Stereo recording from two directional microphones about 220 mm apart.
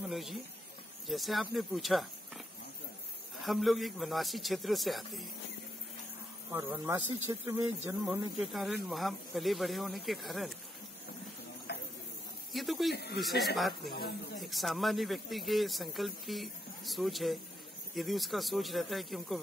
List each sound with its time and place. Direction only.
0.0 s speech: centre (ahead or behind)
3.4 s a man's voice: centre (ahead or behind)
6.5 s speech: 10° right (ahead or behind)
8.1 s a man's voice: centre (ahead or behind)
12.5 s speech: centre (ahead or behind)
12.9 s speech: 50° left (ahead or behind)
13.2 s a man's voice: centre (ahead or behind)
13.9 s speech: 45° left (ahead or behind)
14.4 s a man's voice: centre (ahead or behind)